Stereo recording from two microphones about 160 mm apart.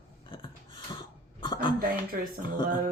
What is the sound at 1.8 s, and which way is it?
Speech, 65° right (ahead or behind).